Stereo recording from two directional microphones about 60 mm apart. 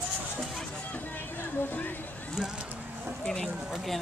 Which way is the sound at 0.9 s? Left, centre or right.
Left.